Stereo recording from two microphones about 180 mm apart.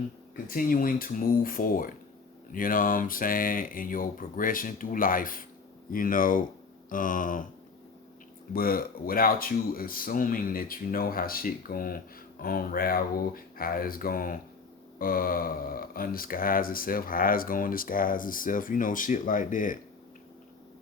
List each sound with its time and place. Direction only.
0.4 s speech: 50° left (ahead or behind)
8.5 s speech: 55° left (ahead or behind)